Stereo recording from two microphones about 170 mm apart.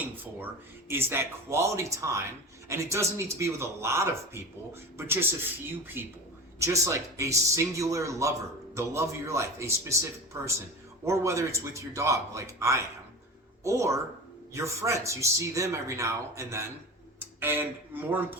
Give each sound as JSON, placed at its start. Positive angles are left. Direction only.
{"t": 0.9, "sound": "speech", "side_deg": -15}